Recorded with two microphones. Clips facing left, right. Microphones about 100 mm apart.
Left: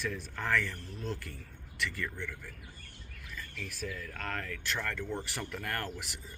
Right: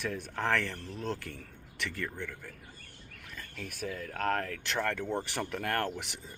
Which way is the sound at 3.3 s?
45° right (ahead or behind).